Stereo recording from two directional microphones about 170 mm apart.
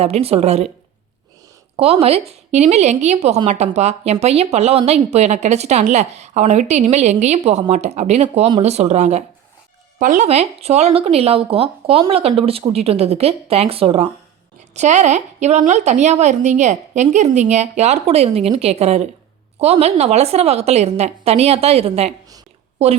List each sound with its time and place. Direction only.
0.0 s a woman's voice: 35° right (ahead or behind)
1.7 s a woman's voice: 35° right (ahead or behind)